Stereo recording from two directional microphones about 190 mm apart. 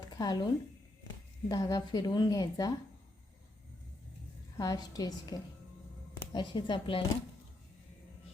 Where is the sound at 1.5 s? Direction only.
20° left (ahead or behind).